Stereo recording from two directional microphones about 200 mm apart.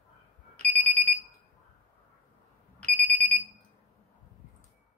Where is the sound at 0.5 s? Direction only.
10° left (ahead or behind).